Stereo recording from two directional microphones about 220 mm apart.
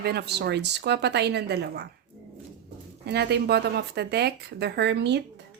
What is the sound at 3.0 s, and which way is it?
Speech, 50° right (ahead or behind).